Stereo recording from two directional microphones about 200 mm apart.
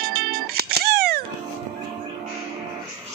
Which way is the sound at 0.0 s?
50° right (ahead or behind).